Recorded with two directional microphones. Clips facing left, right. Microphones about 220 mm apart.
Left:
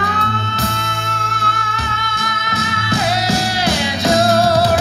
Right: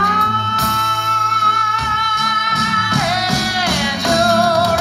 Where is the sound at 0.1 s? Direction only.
30° left (ahead or behind).